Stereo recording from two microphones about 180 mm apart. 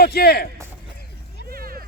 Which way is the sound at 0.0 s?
60° left (ahead or behind).